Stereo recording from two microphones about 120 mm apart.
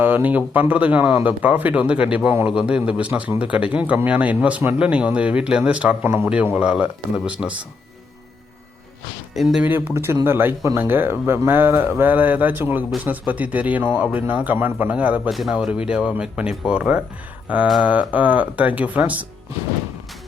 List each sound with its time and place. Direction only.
0.0 s speech: 15° right (ahead or behind)
9.3 s speech: centre (ahead or behind)
9.6 s speech: 20° right (ahead or behind)
15.3 s speech: centre (ahead or behind)